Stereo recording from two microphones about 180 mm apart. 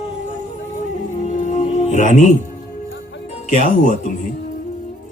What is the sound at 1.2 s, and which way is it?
Music, 40° left (ahead or behind).